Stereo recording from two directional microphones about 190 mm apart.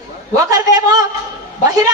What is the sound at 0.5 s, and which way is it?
Speech, 20° right (ahead or behind).